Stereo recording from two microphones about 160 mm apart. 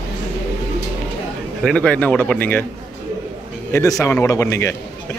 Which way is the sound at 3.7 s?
20° left (ahead or behind).